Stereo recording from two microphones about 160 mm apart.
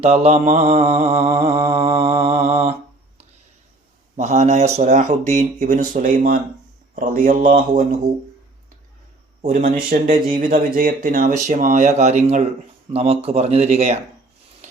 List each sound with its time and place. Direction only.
0.0 s speech: 40° right (ahead or behind)
1.3 s mantra: 15° right (ahead or behind)
2.2 s speech: 45° right (ahead or behind)
4.2 s speech: 45° right (ahead or behind)
9.4 s speech: 50° right (ahead or behind)